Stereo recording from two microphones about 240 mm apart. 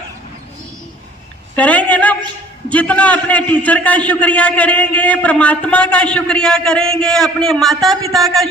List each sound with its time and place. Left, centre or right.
1.5 s a man's voice: centre